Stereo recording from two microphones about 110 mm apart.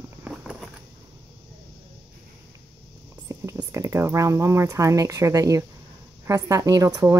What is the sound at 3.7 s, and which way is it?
Speech, 25° right (ahead or behind).